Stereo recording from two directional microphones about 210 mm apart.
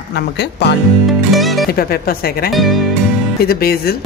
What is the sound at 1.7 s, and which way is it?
Speech, 45° left (ahead or behind).